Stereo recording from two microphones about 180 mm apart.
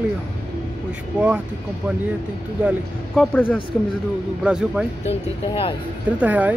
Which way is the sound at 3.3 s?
10° left (ahead or behind).